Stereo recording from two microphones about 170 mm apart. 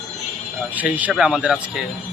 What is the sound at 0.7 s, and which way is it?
Speech, 10° right (ahead or behind).